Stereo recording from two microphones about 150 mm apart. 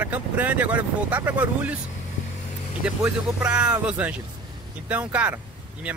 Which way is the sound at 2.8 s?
5° right (ahead or behind).